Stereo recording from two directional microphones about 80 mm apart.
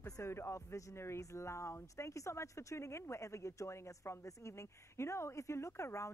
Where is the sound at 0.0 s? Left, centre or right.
Left.